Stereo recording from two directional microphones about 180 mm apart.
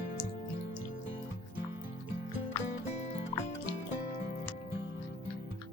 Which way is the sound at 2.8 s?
40° left (ahead or behind).